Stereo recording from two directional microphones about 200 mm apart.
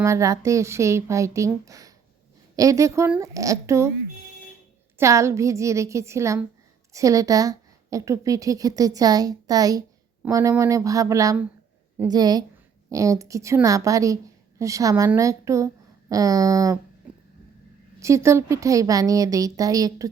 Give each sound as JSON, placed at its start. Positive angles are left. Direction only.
{"t": 0.0, "sound": "a woman's voice", "side_deg": -15}
{"t": 4.9, "sound": "a woman's voice", "side_deg": -15}
{"t": 18.0, "sound": "a woman's voice", "side_deg": -15}